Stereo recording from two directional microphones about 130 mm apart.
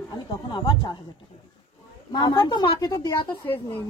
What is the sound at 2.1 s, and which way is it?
A woman's voice, 35° left (ahead or behind).